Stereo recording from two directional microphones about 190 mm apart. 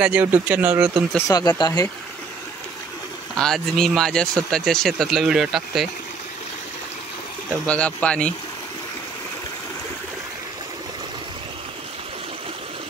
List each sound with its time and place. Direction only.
0.0 s speech: 10° right (ahead or behind)
1.1 s speech: 20° left (ahead or behind)
3.3 s speech: 5° left (ahead or behind)
7.6 s speech: 5° left (ahead or behind)